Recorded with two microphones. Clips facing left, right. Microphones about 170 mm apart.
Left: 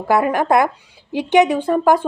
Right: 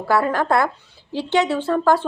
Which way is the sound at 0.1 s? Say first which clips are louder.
Left 3 dB; 15° left (ahead or behind).